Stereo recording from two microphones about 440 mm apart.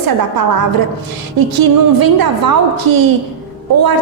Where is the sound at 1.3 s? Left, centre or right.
Right.